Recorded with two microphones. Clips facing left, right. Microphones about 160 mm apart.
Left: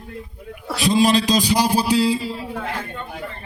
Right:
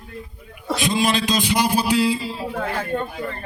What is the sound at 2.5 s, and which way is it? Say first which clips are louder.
Speech: right 4 dB; 45° right (ahead or behind).